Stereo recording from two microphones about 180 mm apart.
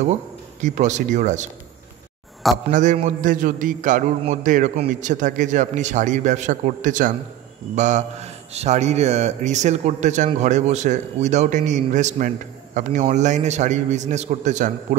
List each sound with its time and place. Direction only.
0.0 s speech: 40° right (ahead or behind)
2.7 s a man's voice: 45° right (ahead or behind)